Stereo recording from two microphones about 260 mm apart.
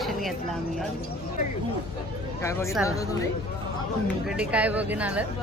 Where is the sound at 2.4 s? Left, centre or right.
Centre.